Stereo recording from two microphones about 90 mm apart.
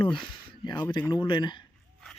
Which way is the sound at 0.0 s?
65° left (ahead or behind).